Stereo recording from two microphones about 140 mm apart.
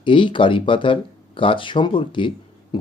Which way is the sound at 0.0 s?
35° left (ahead or behind).